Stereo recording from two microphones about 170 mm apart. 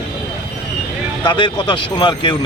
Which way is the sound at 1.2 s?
25° left (ahead or behind).